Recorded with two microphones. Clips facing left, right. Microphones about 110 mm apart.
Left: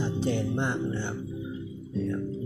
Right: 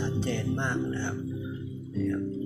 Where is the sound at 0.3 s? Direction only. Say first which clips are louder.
Left 2 dB; 10° left (ahead or behind).